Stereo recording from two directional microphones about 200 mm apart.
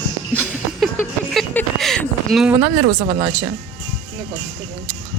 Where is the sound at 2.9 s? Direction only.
25° right (ahead or behind).